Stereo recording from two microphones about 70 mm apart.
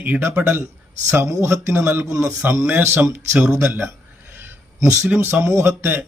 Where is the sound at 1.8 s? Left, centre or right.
Right.